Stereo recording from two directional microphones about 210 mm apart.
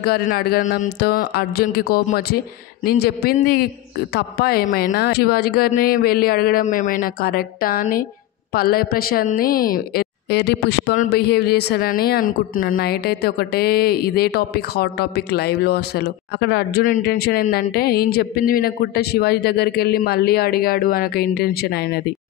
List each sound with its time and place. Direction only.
0.0 s a woman's voice: 45° left (ahead or behind)